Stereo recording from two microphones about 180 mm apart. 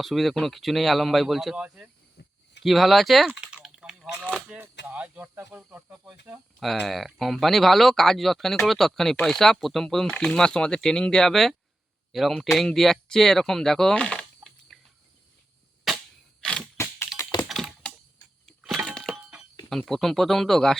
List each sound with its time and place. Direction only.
0.0 s speech: centre (ahead or behind)
2.2 s a sound: 70° left (ahead or behind)
2.6 s speech: centre (ahead or behind)
15.9 s cap gun: centre (ahead or behind)
16.4 s a sound: 5° left (ahead or behind)
16.7 s keys jangling: 15° left (ahead or behind)
17.5 s computer keyboard: centre (ahead or behind)
18.4 s a sound: centre (ahead or behind)
19.7 s speech: centre (ahead or behind)